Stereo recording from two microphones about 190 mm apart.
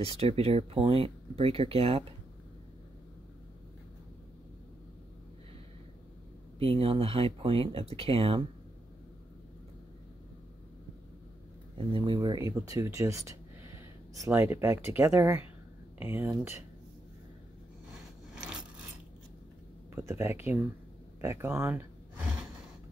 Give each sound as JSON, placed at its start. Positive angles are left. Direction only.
{"t": 0.0, "sound": "speech", "side_deg": -30}
{"t": 6.6, "sound": "speech", "side_deg": -30}
{"t": 11.9, "sound": "speech", "side_deg": -25}
{"t": 18.3, "sound": "filing", "side_deg": -5}
{"t": 20.0, "sound": "speech", "side_deg": -15}